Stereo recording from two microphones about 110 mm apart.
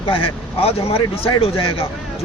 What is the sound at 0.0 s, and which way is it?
Speech, 55° left (ahead or behind).